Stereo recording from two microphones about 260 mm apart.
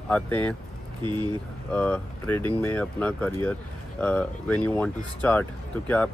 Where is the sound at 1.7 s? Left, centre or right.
Centre.